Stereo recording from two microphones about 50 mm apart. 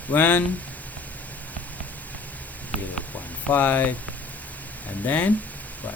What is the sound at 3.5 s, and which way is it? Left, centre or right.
Speech, left.